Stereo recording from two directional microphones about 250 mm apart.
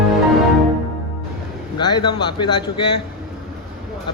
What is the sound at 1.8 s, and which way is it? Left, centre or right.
A man's voice, centre.